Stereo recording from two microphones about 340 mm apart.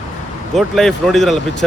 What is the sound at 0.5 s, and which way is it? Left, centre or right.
Speech, centre.